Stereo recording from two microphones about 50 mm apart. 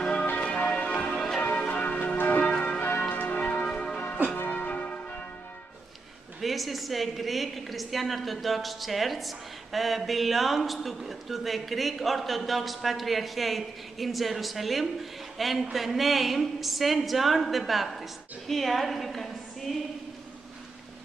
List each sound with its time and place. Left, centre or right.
0.0 s church bell: centre
1.1 s change ringing: centre
1.4 s church bell: left
2.1 s church bell: left
2.5 s church bell: left
2.8 s church bell: left
4.5 s church bell: left
6.4 s a woman's voice: centre
18.5 s a sound: centre